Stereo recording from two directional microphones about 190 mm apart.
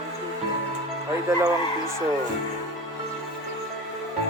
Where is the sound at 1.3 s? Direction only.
15° right (ahead or behind).